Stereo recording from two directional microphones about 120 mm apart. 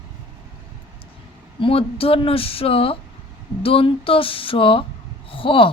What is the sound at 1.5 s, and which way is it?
Speech, 50° left (ahead or behind).